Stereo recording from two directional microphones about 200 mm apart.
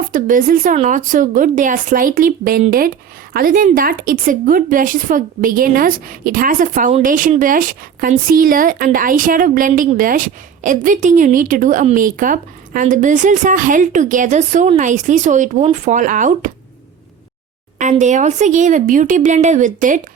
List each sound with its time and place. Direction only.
0.1 s a woman's voice: 45° right (ahead or behind)
18.0 s speech: 35° right (ahead or behind)